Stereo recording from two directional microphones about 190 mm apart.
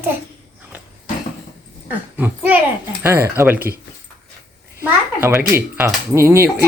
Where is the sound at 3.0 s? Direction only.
10° right (ahead or behind).